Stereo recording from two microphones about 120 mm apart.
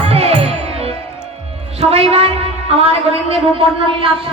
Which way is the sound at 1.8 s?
55° right (ahead or behind).